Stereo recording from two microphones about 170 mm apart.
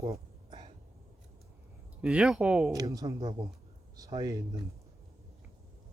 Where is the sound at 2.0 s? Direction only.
5° right (ahead or behind).